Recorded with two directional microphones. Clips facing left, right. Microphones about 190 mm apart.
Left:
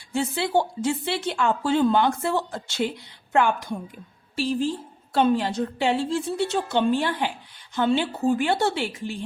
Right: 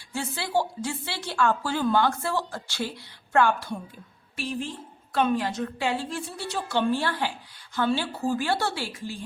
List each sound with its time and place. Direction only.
0.1 s a woman's voice: 20° left (ahead or behind)
4.4 s a woman's voice: 30° left (ahead or behind)